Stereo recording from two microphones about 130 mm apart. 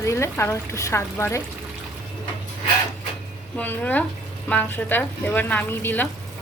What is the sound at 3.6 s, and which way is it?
A woman's voice, 15° left (ahead or behind).